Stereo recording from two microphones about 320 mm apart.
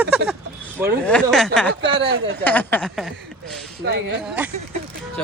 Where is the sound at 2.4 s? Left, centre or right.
Centre.